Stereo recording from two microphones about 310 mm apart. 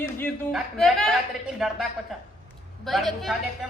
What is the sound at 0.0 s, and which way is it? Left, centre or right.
A man's voice, centre.